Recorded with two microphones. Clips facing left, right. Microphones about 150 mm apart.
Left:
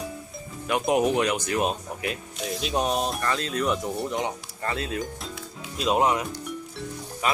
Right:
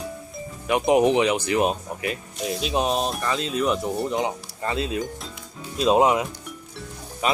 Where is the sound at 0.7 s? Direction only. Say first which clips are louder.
Right 4 dB; 5° right (ahead or behind).